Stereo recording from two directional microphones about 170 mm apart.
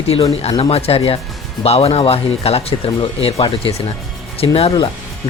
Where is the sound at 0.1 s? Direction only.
35° left (ahead or behind).